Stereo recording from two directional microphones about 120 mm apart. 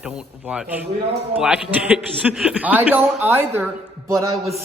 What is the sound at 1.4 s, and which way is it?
A man's voice, 10° right (ahead or behind).